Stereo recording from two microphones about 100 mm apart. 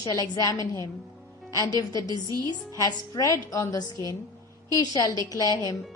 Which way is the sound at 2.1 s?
40° right (ahead or behind).